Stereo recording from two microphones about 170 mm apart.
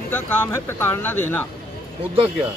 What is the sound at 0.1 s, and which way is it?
A man's voice, 10° left (ahead or behind).